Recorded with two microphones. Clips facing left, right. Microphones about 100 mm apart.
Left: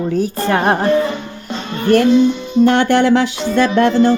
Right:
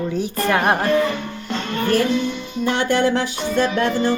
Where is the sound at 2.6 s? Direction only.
60° left (ahead or behind); by 3.4 s 75° left (ahead or behind).